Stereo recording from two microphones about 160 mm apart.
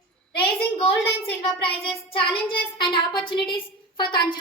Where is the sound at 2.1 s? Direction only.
30° left (ahead or behind).